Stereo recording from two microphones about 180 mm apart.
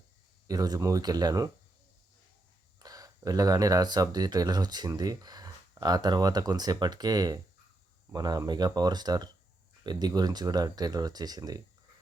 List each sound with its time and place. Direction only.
0.4 s speech: 20° right (ahead or behind)
2.7 s speech: 20° right (ahead or behind)